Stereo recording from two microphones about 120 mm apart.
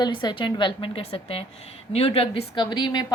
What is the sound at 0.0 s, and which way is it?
A woman's voice, 35° left (ahead or behind).